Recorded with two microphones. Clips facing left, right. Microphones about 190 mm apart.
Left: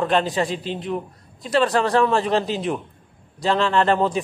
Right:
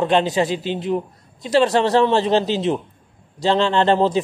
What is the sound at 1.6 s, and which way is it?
A man's voice, 25° right (ahead or behind).